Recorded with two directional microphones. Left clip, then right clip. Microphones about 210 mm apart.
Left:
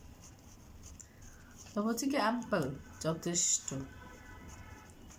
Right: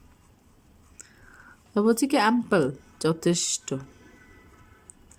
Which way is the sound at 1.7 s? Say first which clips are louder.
Right 12 dB; 50° right (ahead or behind).